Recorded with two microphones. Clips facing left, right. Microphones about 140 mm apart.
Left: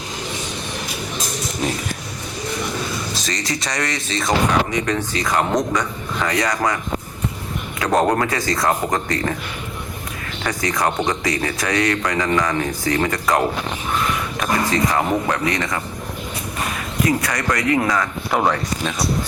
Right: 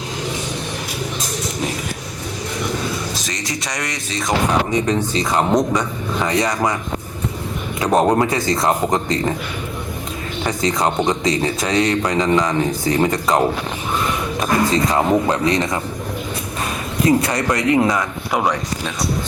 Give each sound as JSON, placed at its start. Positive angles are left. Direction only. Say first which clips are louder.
{"t": 3.2, "sound": "speech", "louder": "left 1 dB", "side_deg": -20}
{"t": 7.8, "sound": "speech", "louder": "right 2 dB", "side_deg": -15}
{"t": 10.4, "sound": "speech", "louder": "right 2 dB", "side_deg": -25}
{"t": 17.1, "sound": "speech", "louder": "right 5 dB", "side_deg": -25}
{"t": 18.3, "sound": "speech", "louder": "left 1 dB", "side_deg": 0}